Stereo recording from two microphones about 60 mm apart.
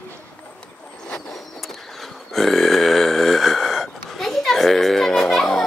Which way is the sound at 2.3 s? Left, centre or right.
Centre.